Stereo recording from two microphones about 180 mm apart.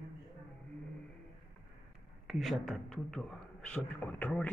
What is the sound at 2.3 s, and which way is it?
A man's voice, centre (ahead or behind).